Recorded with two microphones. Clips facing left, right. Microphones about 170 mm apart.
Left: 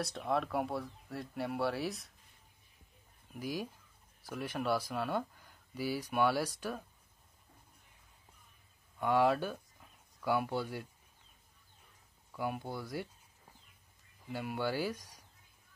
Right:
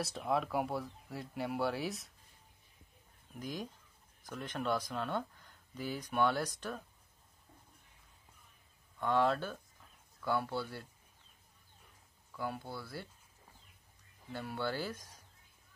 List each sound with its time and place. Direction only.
0.0 s speech: centre (ahead or behind)
3.3 s speech: 5° left (ahead or behind)
9.0 s speech: 10° left (ahead or behind)
12.3 s speech: 15° left (ahead or behind)
14.3 s speech: 10° left (ahead or behind)